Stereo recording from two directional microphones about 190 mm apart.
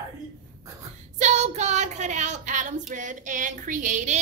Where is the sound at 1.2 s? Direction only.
35° right (ahead or behind).